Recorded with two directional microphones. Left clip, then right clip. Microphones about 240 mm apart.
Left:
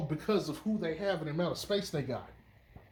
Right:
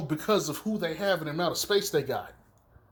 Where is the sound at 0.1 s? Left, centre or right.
Right.